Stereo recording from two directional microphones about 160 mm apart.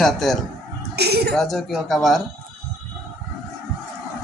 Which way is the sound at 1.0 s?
90° right.